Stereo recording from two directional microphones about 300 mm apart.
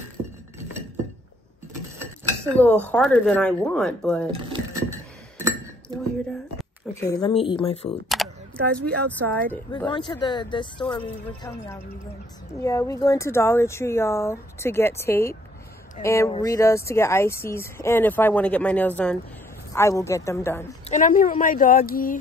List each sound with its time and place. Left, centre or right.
2.9 s speech: centre
4.8 s glass: centre
7.0 s speech: centre
8.1 s speech: centre
20.9 s speech: left